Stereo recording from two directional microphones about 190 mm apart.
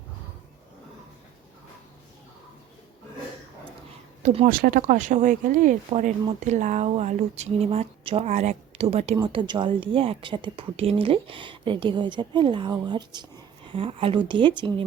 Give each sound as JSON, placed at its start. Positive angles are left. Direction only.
{"t": 4.4, "sound": "a woman's voice", "side_deg": -50}